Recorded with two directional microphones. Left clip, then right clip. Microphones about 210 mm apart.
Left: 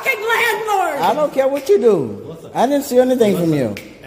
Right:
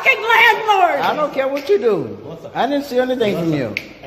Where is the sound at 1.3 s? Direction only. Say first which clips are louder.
Left 2 dB; 50° left (ahead or behind).